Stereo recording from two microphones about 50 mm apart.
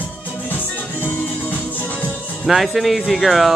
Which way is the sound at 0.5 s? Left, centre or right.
Left.